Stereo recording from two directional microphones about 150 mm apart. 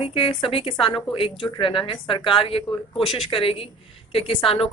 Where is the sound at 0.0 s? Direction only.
35° left (ahead or behind).